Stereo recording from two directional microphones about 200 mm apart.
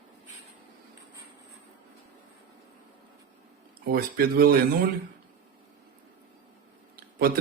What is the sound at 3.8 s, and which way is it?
Speech, 50° right (ahead or behind).